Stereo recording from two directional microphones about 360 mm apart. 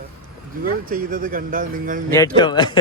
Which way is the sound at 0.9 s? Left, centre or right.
Right.